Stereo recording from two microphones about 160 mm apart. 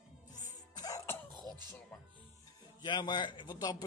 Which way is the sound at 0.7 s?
20° left (ahead or behind).